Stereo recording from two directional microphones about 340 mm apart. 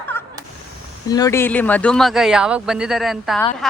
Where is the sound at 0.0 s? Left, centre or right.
Centre.